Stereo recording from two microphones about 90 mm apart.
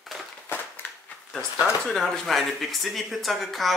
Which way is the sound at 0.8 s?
20° left (ahead or behind).